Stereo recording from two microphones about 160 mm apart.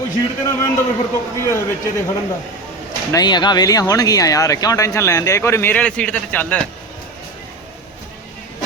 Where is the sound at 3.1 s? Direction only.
25° left (ahead or behind); by 6.6 s 10° left (ahead or behind).